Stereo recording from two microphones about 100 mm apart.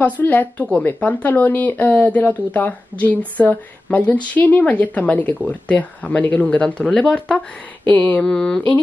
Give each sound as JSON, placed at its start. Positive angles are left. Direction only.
{"t": 0.0, "sound": "speech", "side_deg": 20}